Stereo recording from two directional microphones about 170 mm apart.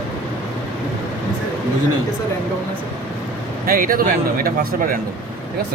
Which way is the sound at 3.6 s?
55° right (ahead or behind).